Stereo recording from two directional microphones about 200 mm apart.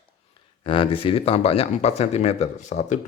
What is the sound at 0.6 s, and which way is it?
Speech, 25° left (ahead or behind).